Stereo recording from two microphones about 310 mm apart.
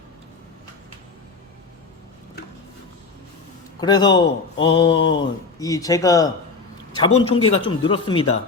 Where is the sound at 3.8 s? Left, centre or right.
Centre.